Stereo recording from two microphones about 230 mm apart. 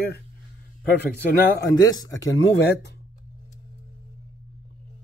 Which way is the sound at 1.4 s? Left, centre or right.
Centre.